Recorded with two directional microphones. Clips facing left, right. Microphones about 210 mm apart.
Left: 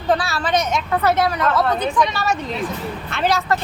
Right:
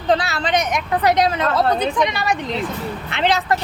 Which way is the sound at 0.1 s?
20° right (ahead or behind).